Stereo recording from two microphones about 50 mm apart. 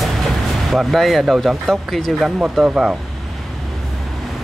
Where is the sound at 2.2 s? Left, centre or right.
Right.